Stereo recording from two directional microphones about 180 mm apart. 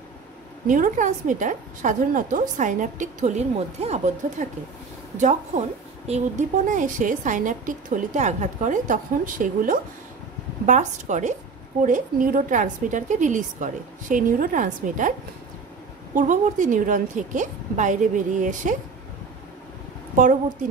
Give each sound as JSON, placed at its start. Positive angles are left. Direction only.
{"t": 0.7, "sound": "a woman's voice", "side_deg": -45}
{"t": 16.2, "sound": "a woman's voice", "side_deg": -45}